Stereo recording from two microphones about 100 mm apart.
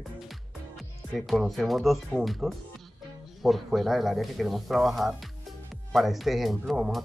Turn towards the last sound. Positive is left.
turn(degrees=-5)  # may be behind; listen again after turning